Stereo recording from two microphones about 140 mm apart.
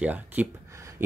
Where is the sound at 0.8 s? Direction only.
20° right (ahead or behind).